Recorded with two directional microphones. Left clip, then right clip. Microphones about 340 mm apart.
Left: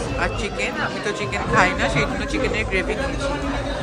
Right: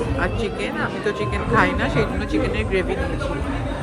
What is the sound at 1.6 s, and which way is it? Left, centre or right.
Speech, centre.